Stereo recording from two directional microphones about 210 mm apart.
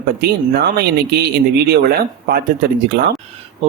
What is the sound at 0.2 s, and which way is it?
Speech, 50° right (ahead or behind).